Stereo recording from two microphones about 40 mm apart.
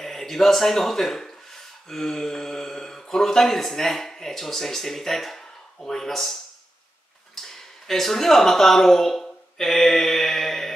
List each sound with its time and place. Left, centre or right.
0.0 s speech: centre
7.4 s speech: centre